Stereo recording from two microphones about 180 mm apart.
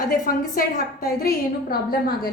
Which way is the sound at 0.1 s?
50° left (ahead or behind).